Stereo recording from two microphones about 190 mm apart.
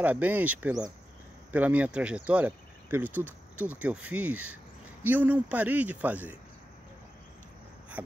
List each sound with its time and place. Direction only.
0.0 s speech: 10° right (ahead or behind)